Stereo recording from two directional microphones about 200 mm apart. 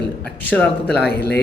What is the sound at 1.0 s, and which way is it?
Speech, 55° left (ahead or behind).